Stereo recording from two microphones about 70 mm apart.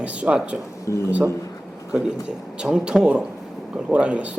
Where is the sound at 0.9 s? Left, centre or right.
Left.